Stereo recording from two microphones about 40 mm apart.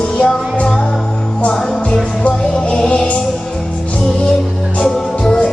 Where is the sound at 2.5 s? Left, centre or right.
Centre.